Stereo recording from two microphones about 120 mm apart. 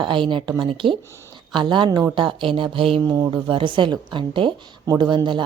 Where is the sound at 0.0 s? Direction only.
45° right (ahead or behind).